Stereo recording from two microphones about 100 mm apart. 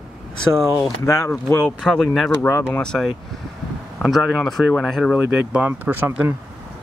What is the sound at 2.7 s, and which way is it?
Speech, 5° left (ahead or behind).